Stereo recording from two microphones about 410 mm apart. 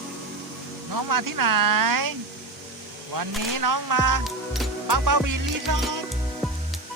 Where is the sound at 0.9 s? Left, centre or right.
Right.